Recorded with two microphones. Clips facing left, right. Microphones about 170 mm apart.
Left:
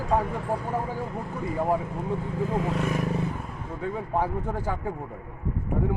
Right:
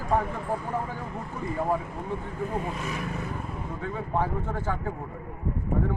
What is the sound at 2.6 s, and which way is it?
Speech, 75° left (ahead or behind).